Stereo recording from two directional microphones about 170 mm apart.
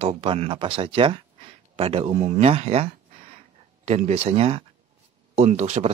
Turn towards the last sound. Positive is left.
turn(degrees=-40)  # may be behind; listen again after turning